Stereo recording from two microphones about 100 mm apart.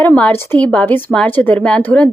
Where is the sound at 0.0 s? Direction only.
15° left (ahead or behind).